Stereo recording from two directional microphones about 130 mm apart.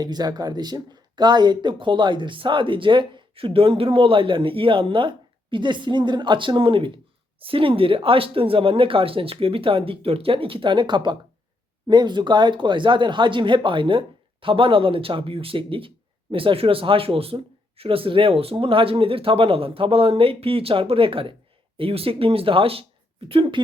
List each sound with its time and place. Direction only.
0.0 s speech: 30° right (ahead or behind)